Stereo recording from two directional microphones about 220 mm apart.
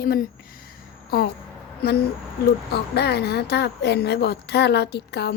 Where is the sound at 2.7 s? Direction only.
50° left (ahead or behind).